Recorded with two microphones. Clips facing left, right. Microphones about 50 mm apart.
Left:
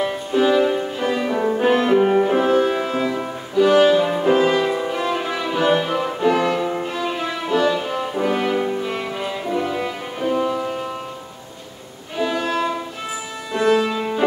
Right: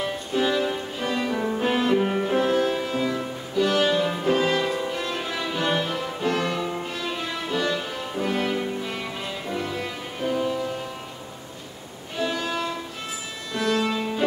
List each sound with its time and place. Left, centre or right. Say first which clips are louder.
0.0 s music: left 6 dB; centre
5.9 s music: left 7 dB; left
6.2 s music: left 7 dB; centre
7.8 s french horn: left 6 dB; centre
8.8 s music: left 6 dB; centre
12.2 s violin: left 6 dB; centre
13.5 s music: left 6 dB; centre